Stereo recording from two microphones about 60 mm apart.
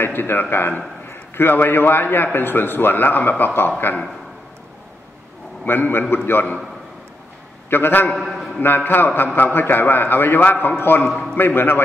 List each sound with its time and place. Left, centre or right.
0.0 s a man's voice: left
5.7 s a man's voice: left
7.7 s a man's voice: left
8.2 s a sound: centre
8.5 s a man's voice: left